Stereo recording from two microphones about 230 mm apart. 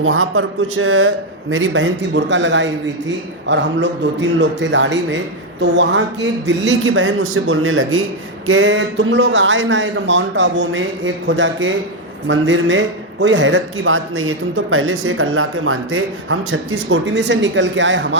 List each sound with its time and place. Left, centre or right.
0.0 s speech: right
6.8 s speech: right
16.9 s speech: right